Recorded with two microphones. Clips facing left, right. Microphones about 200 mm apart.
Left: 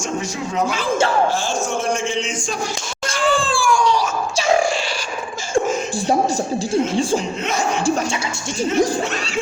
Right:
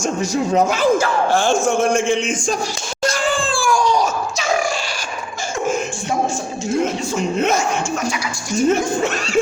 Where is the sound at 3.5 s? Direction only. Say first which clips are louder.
Even; 40° right (ahead or behind).